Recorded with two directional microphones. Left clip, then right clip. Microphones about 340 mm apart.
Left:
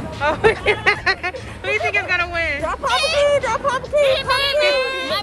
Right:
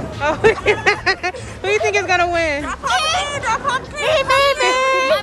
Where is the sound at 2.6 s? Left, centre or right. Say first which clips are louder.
Even; centre.